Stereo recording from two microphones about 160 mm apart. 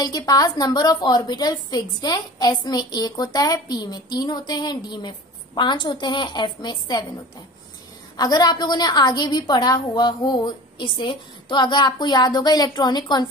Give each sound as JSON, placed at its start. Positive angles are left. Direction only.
{"t": 0.3, "sound": "a woman's voice", "side_deg": 25}
{"t": 8.2, "sound": "a woman's voice", "side_deg": 25}